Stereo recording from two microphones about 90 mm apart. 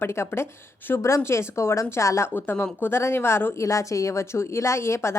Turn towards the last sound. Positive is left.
turn(degrees=30)  # may be behind; listen again after turning